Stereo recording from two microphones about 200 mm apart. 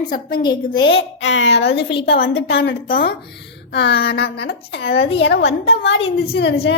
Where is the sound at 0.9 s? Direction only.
75° left (ahead or behind).